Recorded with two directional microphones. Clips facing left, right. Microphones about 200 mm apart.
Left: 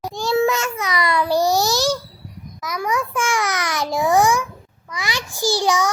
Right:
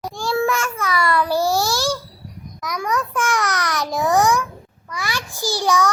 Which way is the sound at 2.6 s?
5° left (ahead or behind).